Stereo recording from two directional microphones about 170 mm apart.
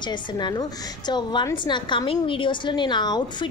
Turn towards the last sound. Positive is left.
turn(degrees=25)  # may be behind; listen again after turning